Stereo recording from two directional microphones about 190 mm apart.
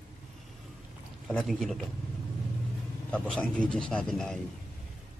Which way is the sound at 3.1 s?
5° left (ahead or behind).